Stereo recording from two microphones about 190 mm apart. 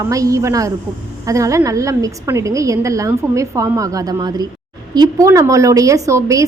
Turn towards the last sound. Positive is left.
turn(degrees=-15)  # may be behind; listen again after turning